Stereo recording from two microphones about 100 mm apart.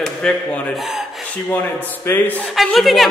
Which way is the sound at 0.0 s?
5° left (ahead or behind).